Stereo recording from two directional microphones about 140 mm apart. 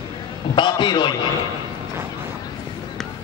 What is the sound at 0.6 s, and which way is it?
Speech, 35° left (ahead or behind).